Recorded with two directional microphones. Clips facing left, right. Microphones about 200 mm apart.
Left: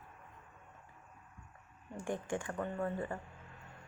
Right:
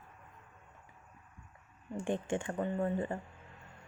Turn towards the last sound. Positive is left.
turn(degrees=-20)  # may be behind; listen again after turning